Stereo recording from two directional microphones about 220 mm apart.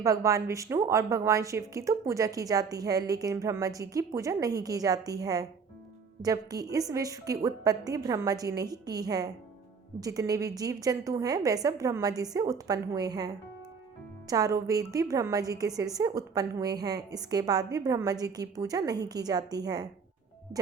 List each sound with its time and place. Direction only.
0.0 s a woman's voice: 15° right (ahead or behind)